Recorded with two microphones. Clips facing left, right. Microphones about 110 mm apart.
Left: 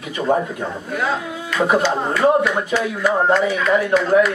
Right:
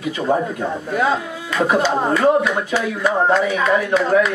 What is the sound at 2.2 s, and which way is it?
A man's voice, centre (ahead or behind).